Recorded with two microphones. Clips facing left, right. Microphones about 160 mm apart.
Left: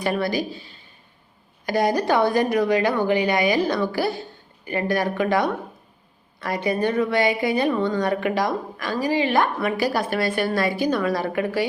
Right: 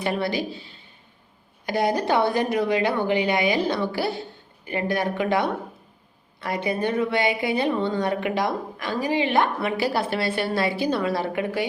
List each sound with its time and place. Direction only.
0.0 s a woman's voice: 20° right (ahead or behind)